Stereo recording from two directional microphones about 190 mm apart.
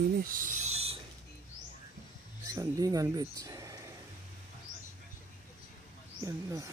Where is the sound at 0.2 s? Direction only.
45° right (ahead or behind).